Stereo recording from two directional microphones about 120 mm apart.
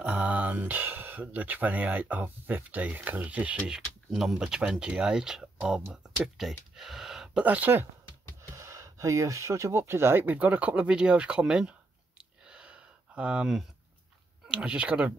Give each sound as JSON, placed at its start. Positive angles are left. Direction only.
{"t": 0.0, "sound": "speech", "side_deg": -10}
{"t": 8.4, "sound": "speech", "side_deg": -25}
{"t": 12.2, "sound": "a sound", "side_deg": -5}
{"t": 14.5, "sound": "speech", "side_deg": -10}